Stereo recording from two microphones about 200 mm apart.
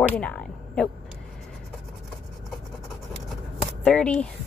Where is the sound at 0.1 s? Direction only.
5° left (ahead or behind).